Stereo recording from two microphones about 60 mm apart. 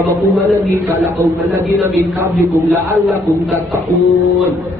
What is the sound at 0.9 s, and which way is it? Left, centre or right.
A man's voice, right.